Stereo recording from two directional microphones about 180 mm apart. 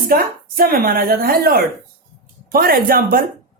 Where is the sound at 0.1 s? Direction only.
55° right (ahead or behind).